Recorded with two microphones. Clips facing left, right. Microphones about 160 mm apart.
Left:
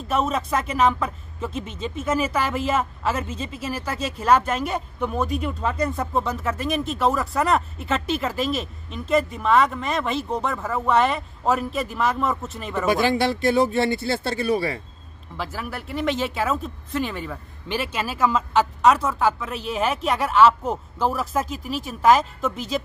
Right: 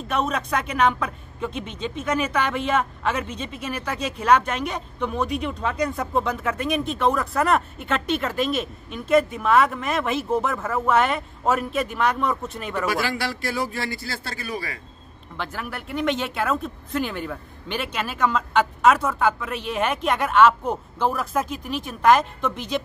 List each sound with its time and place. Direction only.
0.1 s speech: 5° left (ahead or behind)
12.8 s speech: 20° left (ahead or behind)
15.3 s speech: centre (ahead or behind)